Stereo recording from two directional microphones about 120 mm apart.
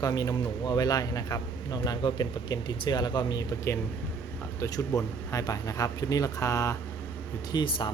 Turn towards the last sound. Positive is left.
turn(degrees=40)  # may be behind; listen again after turning